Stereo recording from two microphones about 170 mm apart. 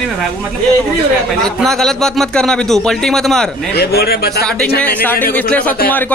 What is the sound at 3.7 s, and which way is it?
Speech, 70° left (ahead or behind).